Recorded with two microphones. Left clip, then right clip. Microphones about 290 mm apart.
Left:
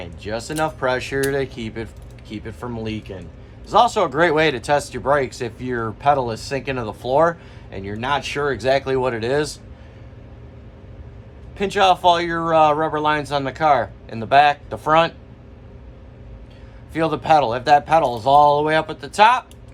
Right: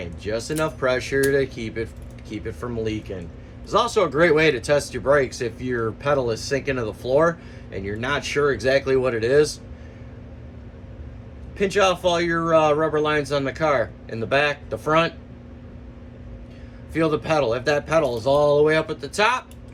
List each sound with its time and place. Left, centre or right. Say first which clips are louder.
0.0 s speech: even; centre
11.5 s speech: left 3 dB; centre
16.9 s speech: left 5 dB; centre